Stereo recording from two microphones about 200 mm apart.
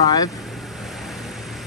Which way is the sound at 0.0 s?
20° left (ahead or behind).